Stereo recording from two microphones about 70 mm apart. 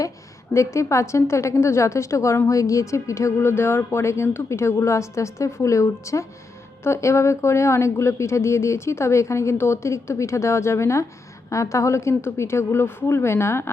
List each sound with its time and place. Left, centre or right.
0.5 s a woman's voice: left